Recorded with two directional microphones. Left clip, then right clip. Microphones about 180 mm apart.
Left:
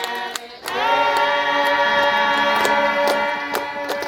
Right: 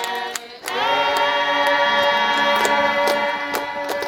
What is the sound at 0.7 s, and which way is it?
Choir, 20° left (ahead or behind).